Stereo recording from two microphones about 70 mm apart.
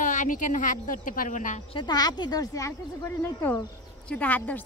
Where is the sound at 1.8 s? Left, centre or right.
Left.